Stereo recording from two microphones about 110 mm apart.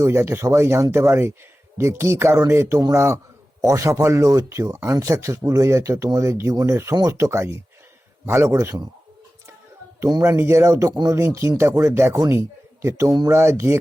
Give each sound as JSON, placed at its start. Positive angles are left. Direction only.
{"t": 0.0, "sound": "speech", "side_deg": -25}
{"t": 10.1, "sound": "speech", "side_deg": -25}